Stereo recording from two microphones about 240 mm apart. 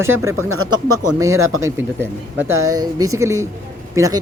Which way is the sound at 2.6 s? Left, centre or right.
Centre.